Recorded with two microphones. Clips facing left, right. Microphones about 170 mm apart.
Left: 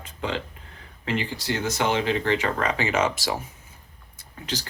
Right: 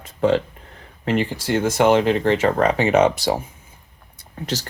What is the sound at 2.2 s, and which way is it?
Speech, 40° right (ahead or behind).